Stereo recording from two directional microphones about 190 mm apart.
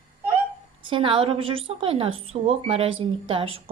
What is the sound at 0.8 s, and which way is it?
A woman's voice, 25° right (ahead or behind).